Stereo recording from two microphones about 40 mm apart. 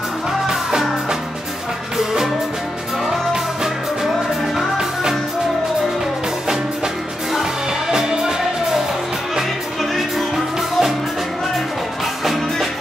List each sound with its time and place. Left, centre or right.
0.5 s music: centre
7.9 s music: centre
9.9 s music: centre